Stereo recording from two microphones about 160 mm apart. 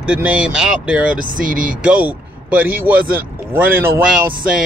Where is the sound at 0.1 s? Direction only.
10° right (ahead or behind).